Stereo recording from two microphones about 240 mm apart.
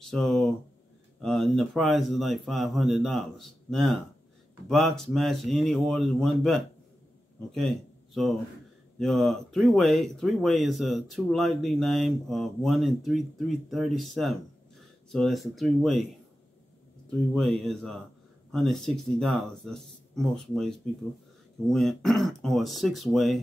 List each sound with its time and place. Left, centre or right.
0.0 s speech: centre
17.3 s speech: centre